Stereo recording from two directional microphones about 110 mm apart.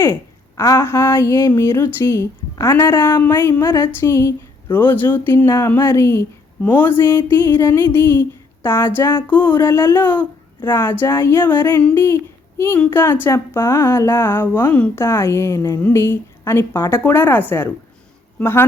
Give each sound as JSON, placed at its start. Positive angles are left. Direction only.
{"t": 0.0, "sound": "speech", "side_deg": 25}
{"t": 11.9, "sound": "a woman's voice", "side_deg": 25}